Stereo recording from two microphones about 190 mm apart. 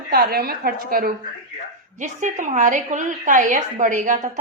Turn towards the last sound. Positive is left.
turn(degrees=-40)  # may be behind; listen again after turning